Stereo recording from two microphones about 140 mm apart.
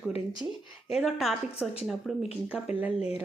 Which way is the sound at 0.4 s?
15° right (ahead or behind).